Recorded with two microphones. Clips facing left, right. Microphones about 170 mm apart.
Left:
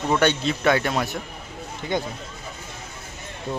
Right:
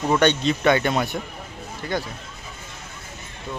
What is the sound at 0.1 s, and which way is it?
Speech, 5° left (ahead or behind).